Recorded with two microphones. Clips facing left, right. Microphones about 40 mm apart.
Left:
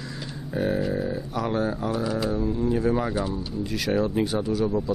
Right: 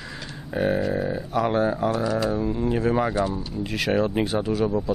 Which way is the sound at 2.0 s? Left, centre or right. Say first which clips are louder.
Right 3 dB; centre.